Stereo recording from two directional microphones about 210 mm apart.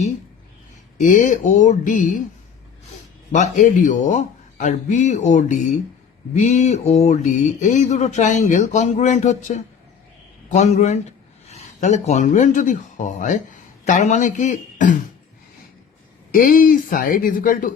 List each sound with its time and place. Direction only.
0.9 s speech: 35° left (ahead or behind)
3.3 s speech: 35° left (ahead or behind)
11.4 s a sound: 30° left (ahead or behind)
12.0 s speech: 35° left (ahead or behind)
16.3 s speech: 40° left (ahead or behind)